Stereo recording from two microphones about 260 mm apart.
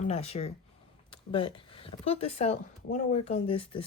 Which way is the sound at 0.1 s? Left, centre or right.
Left.